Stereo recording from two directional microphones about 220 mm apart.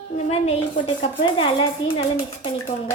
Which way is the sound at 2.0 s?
25° left (ahead or behind).